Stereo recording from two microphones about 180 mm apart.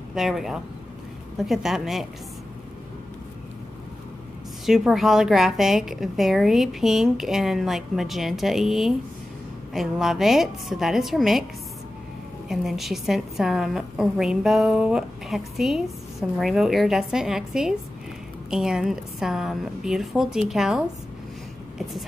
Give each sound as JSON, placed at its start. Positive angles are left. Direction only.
{"t": 0.1, "sound": "a woman's voice", "side_deg": 0}
{"t": 4.6, "sound": "a woman's voice", "side_deg": 0}
{"t": 12.4, "sound": "a woman's voice", "side_deg": 0}